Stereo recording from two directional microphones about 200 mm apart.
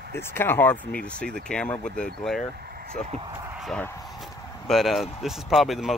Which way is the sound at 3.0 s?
35° left (ahead or behind).